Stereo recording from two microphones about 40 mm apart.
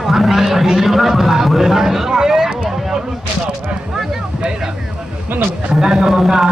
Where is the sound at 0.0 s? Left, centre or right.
Centre.